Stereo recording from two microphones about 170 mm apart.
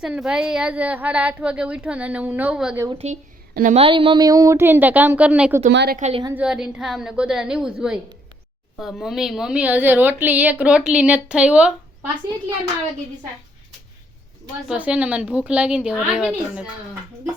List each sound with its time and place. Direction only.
0.0 s a woman's voice: 5° right (ahead or behind)
2.9 s speech: 40° right (ahead or behind)
3.5 s a woman's voice: 50° right (ahead or behind)
3.8 s a woman's voice: 30° right (ahead or behind); by 5.6 s 10° right (ahead or behind)
5.7 s a woman's voice: 75° right (ahead or behind)
6.0 s speech: 40° right (ahead or behind)
6.3 s a woman's voice: 5° right (ahead or behind)
14.7 s a woman's voice: 5° right (ahead or behind)